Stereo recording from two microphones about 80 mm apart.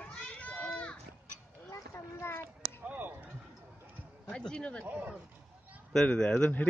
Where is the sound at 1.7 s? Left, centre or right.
Left.